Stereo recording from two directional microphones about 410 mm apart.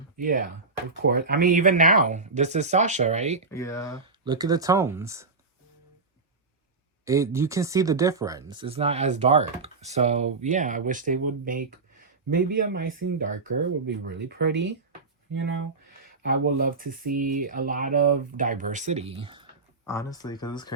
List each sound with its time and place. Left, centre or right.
0.2 s speech: centre
3.5 s speech: centre
4.0 s speech: centre
7.0 s speech: centre
19.8 s speech: centre